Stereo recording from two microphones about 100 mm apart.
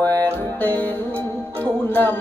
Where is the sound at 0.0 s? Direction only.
20° left (ahead or behind).